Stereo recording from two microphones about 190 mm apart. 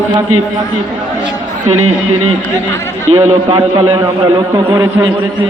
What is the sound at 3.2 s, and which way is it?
A man's voice, 25° right (ahead or behind).